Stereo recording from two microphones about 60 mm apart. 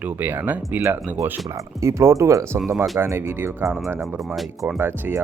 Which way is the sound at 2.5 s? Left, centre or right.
Right.